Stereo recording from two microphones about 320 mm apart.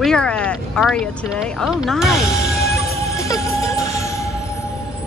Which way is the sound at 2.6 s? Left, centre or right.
Left.